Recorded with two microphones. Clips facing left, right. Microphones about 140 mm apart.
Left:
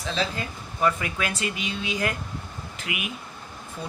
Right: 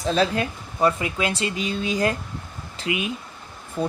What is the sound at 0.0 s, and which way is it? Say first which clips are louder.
Speech: right 7 dB; 45° right (ahead or behind).